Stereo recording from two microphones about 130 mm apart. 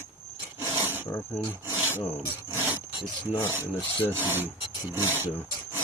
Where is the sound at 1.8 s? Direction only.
15° right (ahead or behind).